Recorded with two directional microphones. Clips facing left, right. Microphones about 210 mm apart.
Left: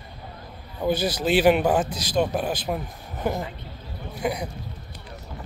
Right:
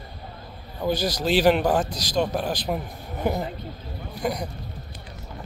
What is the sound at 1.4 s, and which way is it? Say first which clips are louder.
Speech: left 1 dB; 5° left (ahead or behind).